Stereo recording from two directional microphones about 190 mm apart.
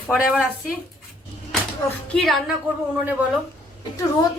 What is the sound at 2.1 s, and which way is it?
Speech, centre (ahead or behind).